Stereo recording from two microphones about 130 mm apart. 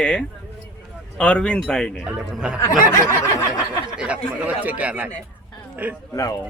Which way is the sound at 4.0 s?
10° right (ahead or behind).